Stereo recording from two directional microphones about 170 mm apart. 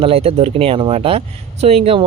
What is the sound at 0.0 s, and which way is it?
Speech, 35° right (ahead or behind).